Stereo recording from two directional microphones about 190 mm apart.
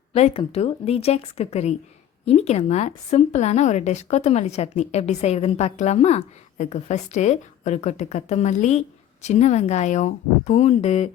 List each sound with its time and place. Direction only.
0.1 s a woman's voice: 30° left (ahead or behind)